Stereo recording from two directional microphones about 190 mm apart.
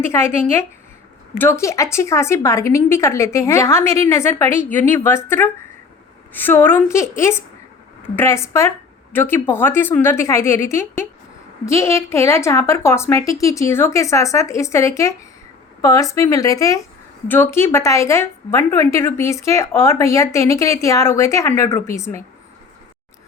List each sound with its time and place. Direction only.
0.1 s a woman's voice: 15° left (ahead or behind)
1.4 s a woman's voice: 15° left (ahead or behind)